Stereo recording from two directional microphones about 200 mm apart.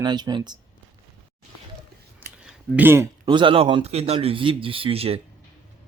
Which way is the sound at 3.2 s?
25° right (ahead or behind).